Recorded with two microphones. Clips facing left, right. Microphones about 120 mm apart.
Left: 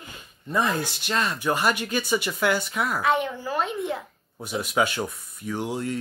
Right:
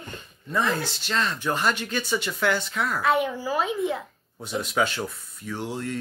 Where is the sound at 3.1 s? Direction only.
5° right (ahead or behind); by 6.0 s 10° left (ahead or behind).